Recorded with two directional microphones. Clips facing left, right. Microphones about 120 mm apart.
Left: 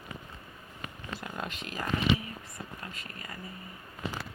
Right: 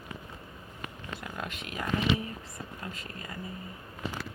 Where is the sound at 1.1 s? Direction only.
Centre (ahead or behind).